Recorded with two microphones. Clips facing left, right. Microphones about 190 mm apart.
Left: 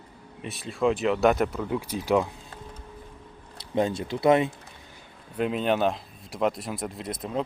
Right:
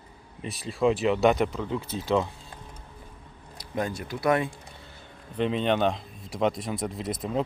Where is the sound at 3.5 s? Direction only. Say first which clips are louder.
Left 5 dB; 25° left (ahead or behind).